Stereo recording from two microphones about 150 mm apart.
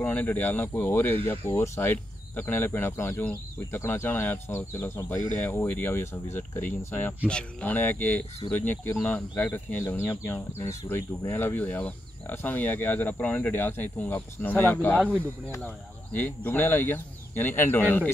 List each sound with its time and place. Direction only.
0.0 s speech: 10° left (ahead or behind)